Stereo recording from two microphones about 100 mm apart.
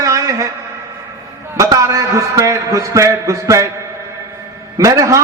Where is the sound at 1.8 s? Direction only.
30° right (ahead or behind).